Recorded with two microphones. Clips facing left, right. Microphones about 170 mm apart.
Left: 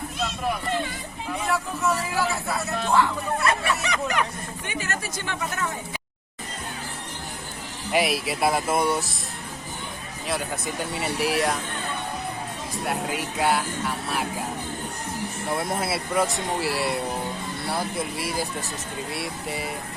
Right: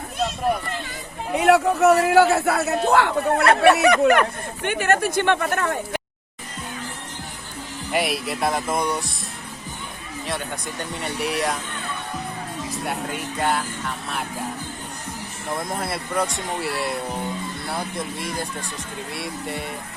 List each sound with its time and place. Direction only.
1.4 s speech: 70° right (ahead or behind)
7.9 s speech: centre (ahead or behind)
10.2 s speech: 5° left (ahead or behind)
12.7 s speech: centre (ahead or behind)
15.4 s speech: 5° left (ahead or behind)